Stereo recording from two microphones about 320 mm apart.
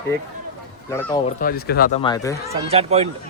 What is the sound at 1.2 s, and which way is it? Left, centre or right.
Speech, left.